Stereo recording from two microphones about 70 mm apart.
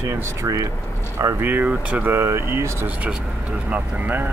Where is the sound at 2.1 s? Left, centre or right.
Right.